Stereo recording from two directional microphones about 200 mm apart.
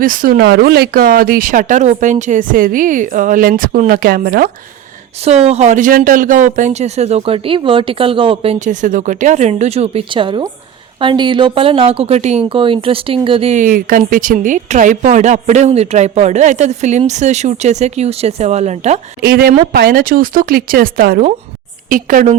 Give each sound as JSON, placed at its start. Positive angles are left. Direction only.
{"t": 0.0, "sound": "speech", "side_deg": -45}
{"t": 5.2, "sound": "speech", "side_deg": -35}
{"t": 19.2, "sound": "speech", "side_deg": -50}